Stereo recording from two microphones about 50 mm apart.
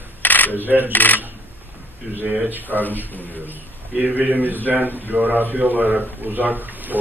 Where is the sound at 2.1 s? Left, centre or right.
Right.